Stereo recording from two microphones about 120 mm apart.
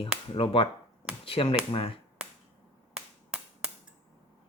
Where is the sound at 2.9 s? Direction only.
5° right (ahead or behind).